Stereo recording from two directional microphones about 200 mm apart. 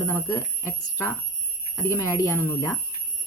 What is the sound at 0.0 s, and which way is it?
Speech, 15° left (ahead or behind).